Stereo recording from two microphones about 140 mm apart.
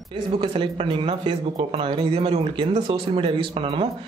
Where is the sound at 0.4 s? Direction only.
35° right (ahead or behind).